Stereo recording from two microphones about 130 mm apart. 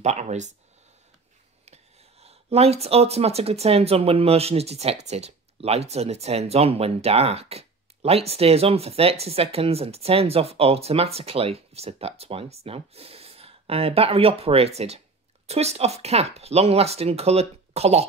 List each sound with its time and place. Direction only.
0.0 s speech: 60° right (ahead or behind)
1.7 s speech: 50° right (ahead or behind)